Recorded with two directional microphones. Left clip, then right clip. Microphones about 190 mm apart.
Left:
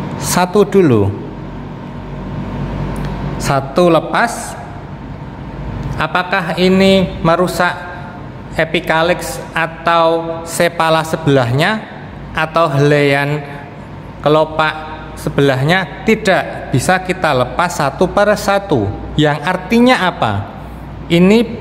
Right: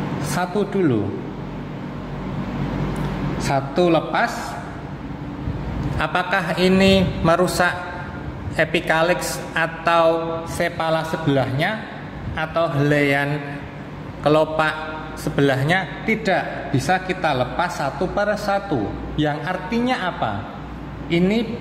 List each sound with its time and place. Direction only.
0.3 s a man's voice: 40° left (ahead or behind)
3.3 s a man's voice: 30° left (ahead or behind)
5.9 s a man's voice: 20° left (ahead or behind)
10.6 s a man's voice: 30° left (ahead or behind)